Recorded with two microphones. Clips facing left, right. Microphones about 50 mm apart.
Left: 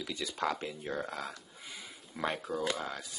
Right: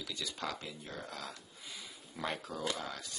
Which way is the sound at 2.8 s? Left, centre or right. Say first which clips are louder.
Left 3 dB; centre.